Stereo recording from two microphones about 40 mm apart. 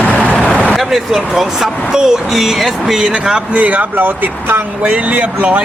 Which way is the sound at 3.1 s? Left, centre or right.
Right.